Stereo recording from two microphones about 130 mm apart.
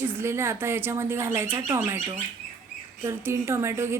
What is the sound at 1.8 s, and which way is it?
A woman's voice, 30° right (ahead or behind).